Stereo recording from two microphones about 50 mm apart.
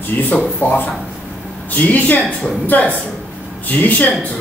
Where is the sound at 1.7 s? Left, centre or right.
Left.